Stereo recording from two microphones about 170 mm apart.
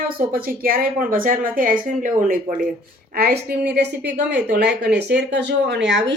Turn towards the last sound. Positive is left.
turn(degrees=-90)